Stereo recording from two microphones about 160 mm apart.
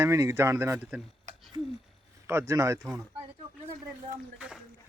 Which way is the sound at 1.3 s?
50° right (ahead or behind).